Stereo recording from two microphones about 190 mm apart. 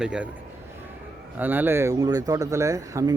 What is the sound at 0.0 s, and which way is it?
Speech, 5° right (ahead or behind).